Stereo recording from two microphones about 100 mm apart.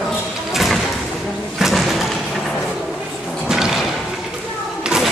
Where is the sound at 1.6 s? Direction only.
Centre (ahead or behind).